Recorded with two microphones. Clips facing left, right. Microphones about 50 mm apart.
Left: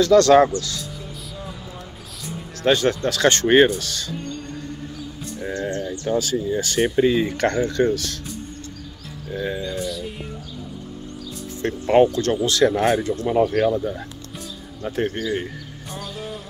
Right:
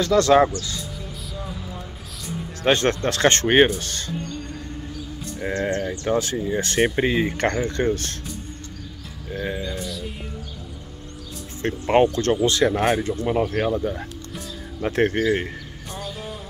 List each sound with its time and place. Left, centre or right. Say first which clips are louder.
0.1 s speech: left 2 dB; centre
0.6 s speech: left 2 dB; centre
2.7 s speech: left 1 dB; right
3.1 s speech: even; right
3.4 s speech: left 3 dB; centre
3.8 s speech: left 1 dB; right
5.5 s speech: right 2 dB; right
7.2 s speech: left 2 dB; right
9.3 s speech: left 2 dB; right
9.8 s speech: left 4 dB; centre
11.6 s speech: left 2 dB; right
14.8 s speech: right 4 dB; right
15.9 s music: left 1 dB; centre